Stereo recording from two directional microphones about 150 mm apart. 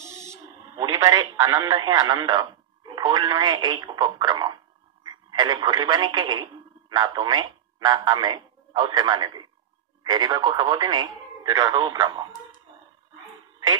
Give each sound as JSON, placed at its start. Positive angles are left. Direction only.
{"t": 0.2, "sound": "speech", "side_deg": -20}